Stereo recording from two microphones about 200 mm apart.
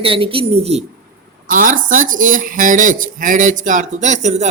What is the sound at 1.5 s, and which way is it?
Speech, 40° right (ahead or behind).